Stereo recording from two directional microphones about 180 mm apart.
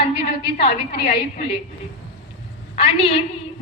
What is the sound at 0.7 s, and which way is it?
Speech, 60° left (ahead or behind).